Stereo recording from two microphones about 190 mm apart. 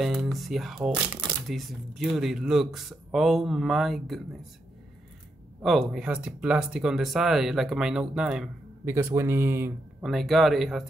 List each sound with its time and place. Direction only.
0.0 s speech: centre (ahead or behind)
5.6 s speech: centre (ahead or behind)
10.0 s speech: centre (ahead or behind)